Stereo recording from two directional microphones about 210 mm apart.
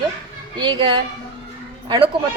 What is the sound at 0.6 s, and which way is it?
Speech, 20° right (ahead or behind).